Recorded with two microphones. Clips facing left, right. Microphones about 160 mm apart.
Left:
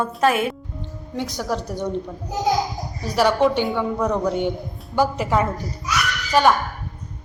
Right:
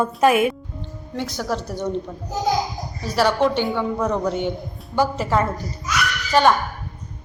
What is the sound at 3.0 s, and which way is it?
A woman's voice, 15° left (ahead or behind).